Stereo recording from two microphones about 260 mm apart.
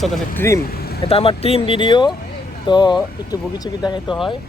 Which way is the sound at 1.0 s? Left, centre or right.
Left.